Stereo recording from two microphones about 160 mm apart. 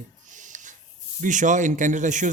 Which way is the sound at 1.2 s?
50° right (ahead or behind).